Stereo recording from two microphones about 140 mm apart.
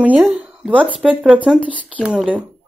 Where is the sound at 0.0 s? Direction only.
10° right (ahead or behind).